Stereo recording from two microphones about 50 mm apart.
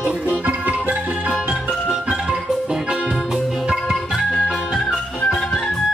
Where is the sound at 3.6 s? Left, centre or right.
Centre.